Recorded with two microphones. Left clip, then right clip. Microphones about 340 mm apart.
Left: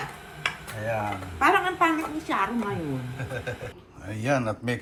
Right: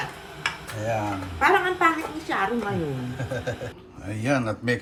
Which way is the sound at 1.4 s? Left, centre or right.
Left.